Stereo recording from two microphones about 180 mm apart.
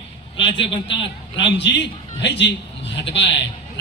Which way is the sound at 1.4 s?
75° left (ahead or behind).